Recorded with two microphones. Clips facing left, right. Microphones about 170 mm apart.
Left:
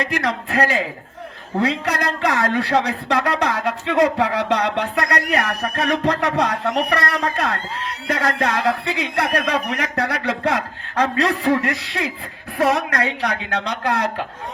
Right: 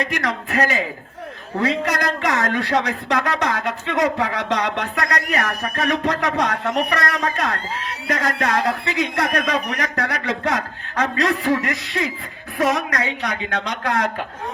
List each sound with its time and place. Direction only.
0.0 s a woman's voice: 30° left (ahead or behind)
2.0 s a man's voice: 30° left (ahead or behind)